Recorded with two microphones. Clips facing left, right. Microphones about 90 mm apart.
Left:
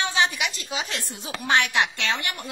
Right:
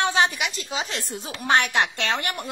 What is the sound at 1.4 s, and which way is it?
Speech, 40° right (ahead or behind).